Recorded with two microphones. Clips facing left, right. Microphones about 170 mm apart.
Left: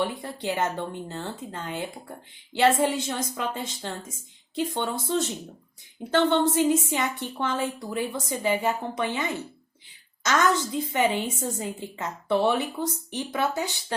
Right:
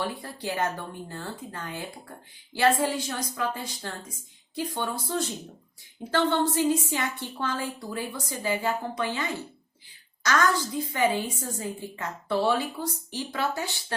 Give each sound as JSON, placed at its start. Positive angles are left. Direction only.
{"t": 0.0, "sound": "a woman's voice", "side_deg": 20}